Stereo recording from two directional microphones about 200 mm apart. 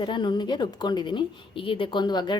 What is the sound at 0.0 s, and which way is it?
A woman's voice, 25° left (ahead or behind).